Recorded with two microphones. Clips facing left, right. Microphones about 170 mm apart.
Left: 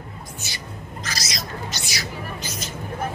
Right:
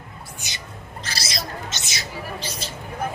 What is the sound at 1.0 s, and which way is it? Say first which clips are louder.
Hubbub: right 1 dB; 30° right (ahead or behind).